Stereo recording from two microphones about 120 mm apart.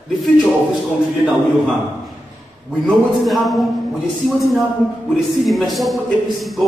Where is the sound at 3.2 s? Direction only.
Centre (ahead or behind).